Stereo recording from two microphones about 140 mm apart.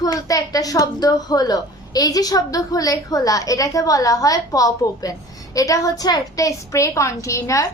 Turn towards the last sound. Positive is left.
turn(degrees=20)  # may be behind; listen again after turning